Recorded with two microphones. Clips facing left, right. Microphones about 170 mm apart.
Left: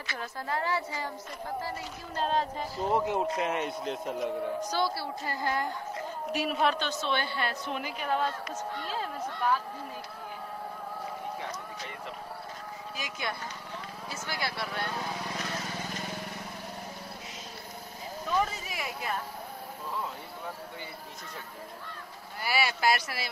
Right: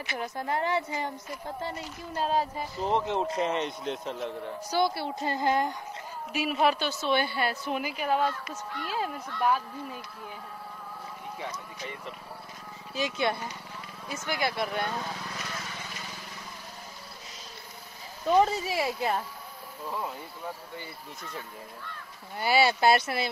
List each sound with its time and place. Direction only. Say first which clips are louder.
0.1 s a woman's voice: right 3 dB; 20° right (ahead or behind)
2.1 s a woman's voice: right 1 dB; 10° right (ahead or behind)
2.9 s speech: even; 10° left (ahead or behind)
4.6 s a woman's voice: right 3 dB; 15° right (ahead or behind)
6.3 s a woman's voice: right 2 dB; centre (ahead or behind)
12.9 s a woman's voice: right 9 dB; 25° right (ahead or behind)
15.6 s vehicle: left 4 dB; 40° left (ahead or behind)
18.3 s speech: right 8 dB; 30° right (ahead or behind)
22.4 s a woman's voice: right 6 dB; 25° right (ahead or behind)